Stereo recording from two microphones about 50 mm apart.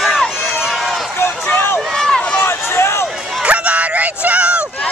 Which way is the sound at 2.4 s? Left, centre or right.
Left.